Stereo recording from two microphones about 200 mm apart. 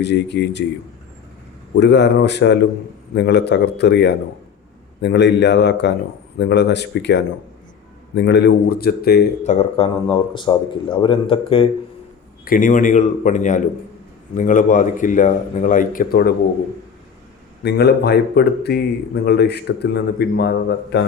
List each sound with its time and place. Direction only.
0.0 s a man's voice: 55° left (ahead or behind)
1.7 s a man's voice: 60° left (ahead or behind)
9.4 s a man's voice: 35° left (ahead or behind)
12.5 s speech: 40° left (ahead or behind)
17.6 s a man's voice: 55° left (ahead or behind)